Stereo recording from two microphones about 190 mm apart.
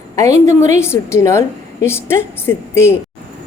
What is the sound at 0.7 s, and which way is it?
A woman's voice, 15° left (ahead or behind).